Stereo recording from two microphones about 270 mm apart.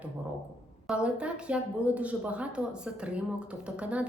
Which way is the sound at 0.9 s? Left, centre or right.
Centre.